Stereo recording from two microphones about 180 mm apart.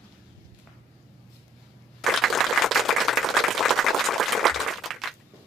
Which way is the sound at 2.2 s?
Centre (ahead or behind).